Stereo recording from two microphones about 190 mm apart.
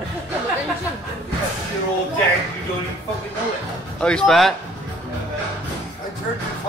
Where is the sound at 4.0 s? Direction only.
5° left (ahead or behind).